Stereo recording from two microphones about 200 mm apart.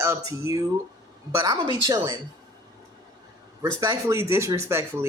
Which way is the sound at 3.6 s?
20° right (ahead or behind).